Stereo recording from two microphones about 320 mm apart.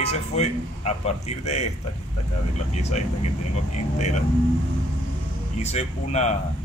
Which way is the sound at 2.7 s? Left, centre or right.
Centre.